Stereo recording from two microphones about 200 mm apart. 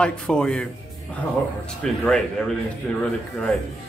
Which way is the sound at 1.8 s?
5° left (ahead or behind).